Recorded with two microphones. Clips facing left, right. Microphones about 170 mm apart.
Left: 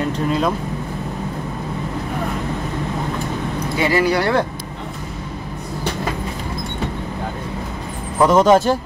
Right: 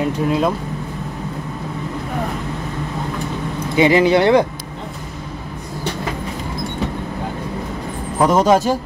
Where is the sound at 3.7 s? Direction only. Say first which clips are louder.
Right 5 dB; 20° right (ahead or behind).